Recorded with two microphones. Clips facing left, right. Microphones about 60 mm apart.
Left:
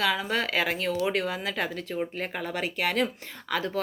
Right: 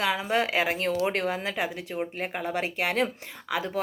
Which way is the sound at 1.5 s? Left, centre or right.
Centre.